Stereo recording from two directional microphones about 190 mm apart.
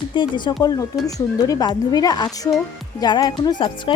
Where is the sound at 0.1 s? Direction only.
25° left (ahead or behind).